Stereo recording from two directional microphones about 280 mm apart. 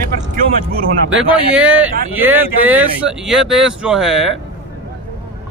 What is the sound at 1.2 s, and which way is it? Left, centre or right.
Speech, centre.